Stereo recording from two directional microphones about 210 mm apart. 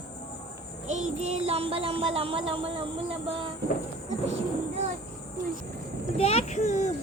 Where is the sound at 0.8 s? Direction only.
30° right (ahead or behind).